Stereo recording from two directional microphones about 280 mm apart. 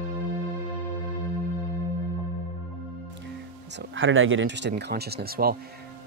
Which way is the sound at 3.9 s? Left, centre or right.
Right.